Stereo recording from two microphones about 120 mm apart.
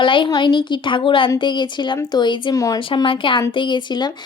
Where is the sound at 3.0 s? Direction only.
45° left (ahead or behind).